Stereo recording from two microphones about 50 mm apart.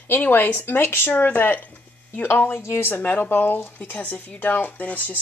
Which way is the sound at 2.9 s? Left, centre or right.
Left.